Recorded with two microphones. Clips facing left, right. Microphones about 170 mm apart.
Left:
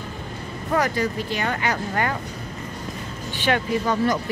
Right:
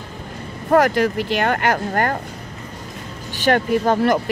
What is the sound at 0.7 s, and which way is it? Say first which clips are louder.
Speech: right 7 dB; 50° right (ahead or behind).